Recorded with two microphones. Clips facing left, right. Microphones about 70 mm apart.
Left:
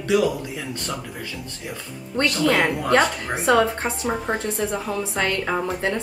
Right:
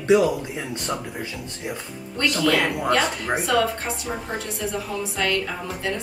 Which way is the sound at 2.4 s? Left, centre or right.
Left.